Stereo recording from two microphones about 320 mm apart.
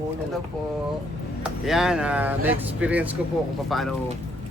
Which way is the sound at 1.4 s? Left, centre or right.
Centre.